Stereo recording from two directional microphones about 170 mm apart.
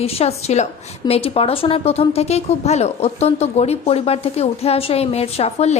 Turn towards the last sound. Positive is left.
turn(degrees=40)  # may be behind; listen again after turning